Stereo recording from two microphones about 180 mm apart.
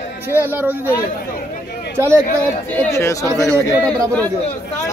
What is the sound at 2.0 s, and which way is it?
Speech, 15° right (ahead or behind).